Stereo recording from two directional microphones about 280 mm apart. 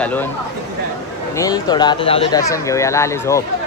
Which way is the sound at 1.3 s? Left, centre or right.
Centre.